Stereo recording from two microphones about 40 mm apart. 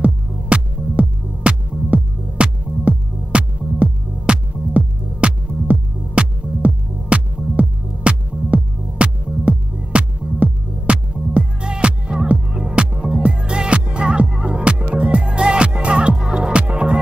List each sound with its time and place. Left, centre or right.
0.0 s music: right